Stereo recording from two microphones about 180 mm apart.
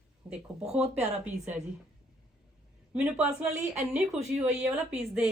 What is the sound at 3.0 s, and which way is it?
A woman's voice, 5° right (ahead or behind).